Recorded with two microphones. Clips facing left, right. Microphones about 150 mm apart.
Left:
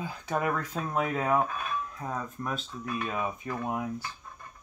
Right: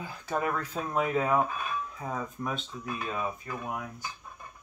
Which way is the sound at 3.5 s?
25° left (ahead or behind).